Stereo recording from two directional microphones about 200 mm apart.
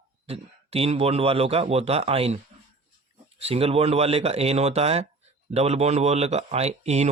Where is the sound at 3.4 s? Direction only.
30° right (ahead or behind).